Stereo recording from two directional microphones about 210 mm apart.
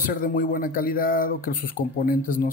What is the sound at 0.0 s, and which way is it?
Speech, 40° left (ahead or behind).